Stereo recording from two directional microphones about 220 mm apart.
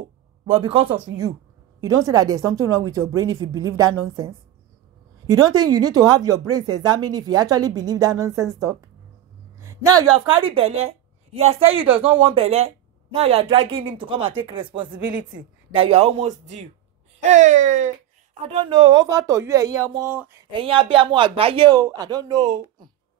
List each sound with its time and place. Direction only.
0.5 s speech: 25° right (ahead or behind)
5.2 s speech: 15° right (ahead or behind)
9.6 s a sound: 15° right (ahead or behind)
10.3 s a woman's voice: 25° right (ahead or behind)
18.5 s speech: 25° right (ahead or behind)
20.5 s speech: 25° right (ahead or behind)